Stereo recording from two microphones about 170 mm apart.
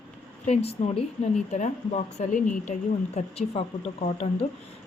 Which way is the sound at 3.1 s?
35° left (ahead or behind).